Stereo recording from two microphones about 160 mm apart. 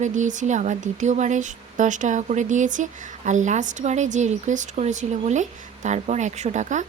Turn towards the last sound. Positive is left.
turn(degrees=-50)  # may be behind; listen again after turning